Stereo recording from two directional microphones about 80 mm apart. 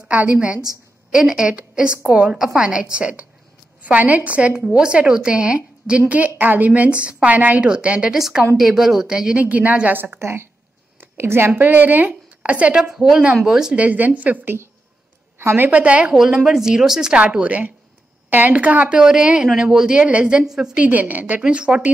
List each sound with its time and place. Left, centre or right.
0.1 s a woman's voice: centre
10.1 s a woman's voice: right; by 13.8 s centre
13.8 s a woman's voice: right
15.8 s a woman's voice: centre
16.2 s a woman's voice: centre